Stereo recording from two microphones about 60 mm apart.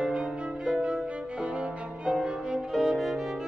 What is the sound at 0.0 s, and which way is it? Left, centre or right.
Music, centre.